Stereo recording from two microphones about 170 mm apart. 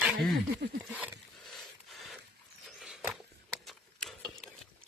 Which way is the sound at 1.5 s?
Centre (ahead or behind).